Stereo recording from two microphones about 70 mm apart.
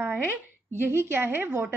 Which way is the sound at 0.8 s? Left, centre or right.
Right.